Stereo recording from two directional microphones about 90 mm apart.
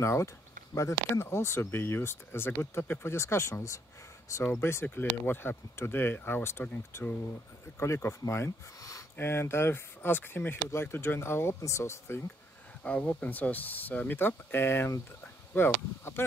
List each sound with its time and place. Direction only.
0.0 s speech: 30° left (ahead or behind)
9.1 s speech: 25° left (ahead or behind)
12.8 s speech: 15° left (ahead or behind)